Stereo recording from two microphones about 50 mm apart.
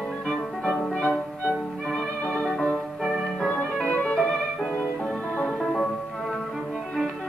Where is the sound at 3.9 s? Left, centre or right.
Left.